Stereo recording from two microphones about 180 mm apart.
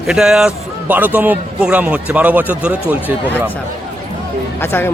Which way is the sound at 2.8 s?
10° left (ahead or behind).